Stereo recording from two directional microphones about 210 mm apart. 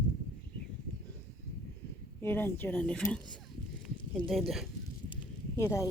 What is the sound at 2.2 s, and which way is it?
Speech, 10° left (ahead or behind).